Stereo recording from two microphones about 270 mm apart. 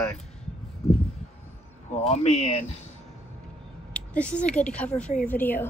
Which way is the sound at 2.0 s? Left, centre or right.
Left.